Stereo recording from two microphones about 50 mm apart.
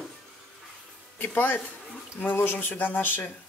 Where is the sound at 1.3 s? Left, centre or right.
Left.